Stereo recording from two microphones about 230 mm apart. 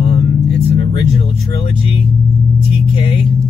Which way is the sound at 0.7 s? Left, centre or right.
Left.